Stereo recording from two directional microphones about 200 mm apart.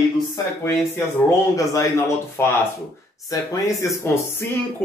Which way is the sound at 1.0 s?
10° left (ahead or behind).